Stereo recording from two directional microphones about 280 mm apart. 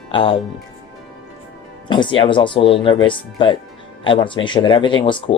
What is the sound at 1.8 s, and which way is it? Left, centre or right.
Speech, centre.